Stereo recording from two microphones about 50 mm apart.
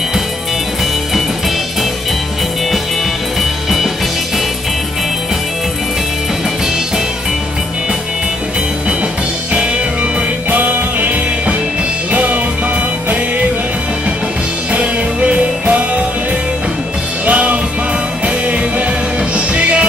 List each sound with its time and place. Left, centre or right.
10.5 s music: right
14.7 s music: right
17.3 s music: right